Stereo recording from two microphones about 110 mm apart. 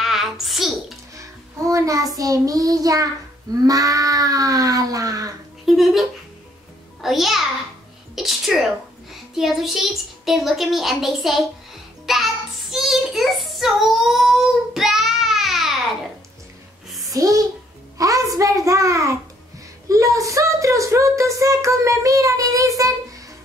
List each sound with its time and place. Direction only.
0.0 s a sound: centre (ahead or behind)
1.1 s child singing: 30° right (ahead or behind)
3.6 s speech: 35° right (ahead or behind)
5.7 s a child's voice: centre (ahead or behind)
8.2 s a sound: centre (ahead or behind)
9.1 s a child's voice: centre (ahead or behind)
12.1 s child singing: centre (ahead or behind)
17.1 s a child's voice: 30° right (ahead or behind)